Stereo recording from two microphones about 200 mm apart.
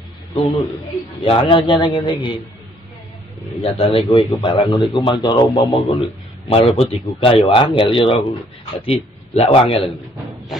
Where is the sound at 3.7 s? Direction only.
30° left (ahead or behind).